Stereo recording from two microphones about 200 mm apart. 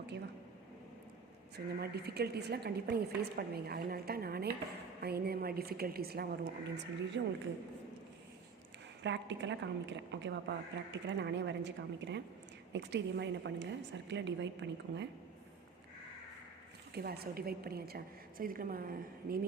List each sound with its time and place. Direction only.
1.5 s a woman's voice: 55° right (ahead or behind)
9.0 s a woman's voice: 60° right (ahead or behind)
16.9 s a woman's voice: 50° right (ahead or behind)